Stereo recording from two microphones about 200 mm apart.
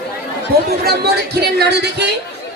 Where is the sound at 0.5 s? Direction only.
50° right (ahead or behind).